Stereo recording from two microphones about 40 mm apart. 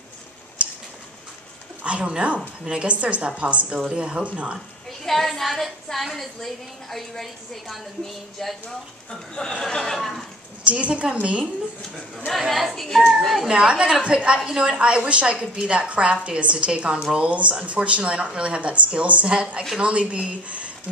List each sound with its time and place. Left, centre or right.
1.8 s a woman's voice: right
2.9 s speech: right
5.0 s a woman's voice: centre
9.3 s speech: left
9.9 s a woman's voice: centre
10.6 s speech: right
12.3 s a woman's voice: centre
13.5 s a woman's voice: right
15.9 s a woman's voice: right